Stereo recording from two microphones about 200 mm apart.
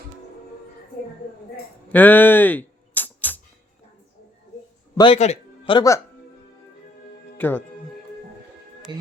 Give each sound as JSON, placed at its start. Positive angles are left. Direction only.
{"t": 1.9, "sound": "a sound", "side_deg": 10}
{"t": 4.9, "sound": "speech", "side_deg": 30}
{"t": 7.3, "sound": "speech", "side_deg": 10}
{"t": 8.9, "sound": "speech", "side_deg": -20}